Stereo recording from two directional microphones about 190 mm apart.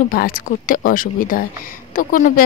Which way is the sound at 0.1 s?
50° left (ahead or behind).